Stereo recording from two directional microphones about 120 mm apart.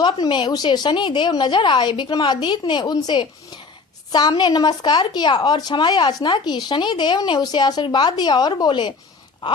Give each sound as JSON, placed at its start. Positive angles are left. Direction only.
{"t": 0.0, "sound": "speech", "side_deg": 40}